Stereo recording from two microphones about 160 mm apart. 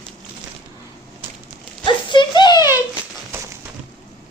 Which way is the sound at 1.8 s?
30° left (ahead or behind).